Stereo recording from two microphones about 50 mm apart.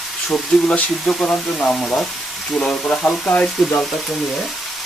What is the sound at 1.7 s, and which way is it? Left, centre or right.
Frying, centre.